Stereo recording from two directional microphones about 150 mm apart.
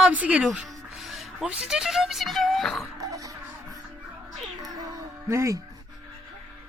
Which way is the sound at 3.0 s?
25° right (ahead or behind).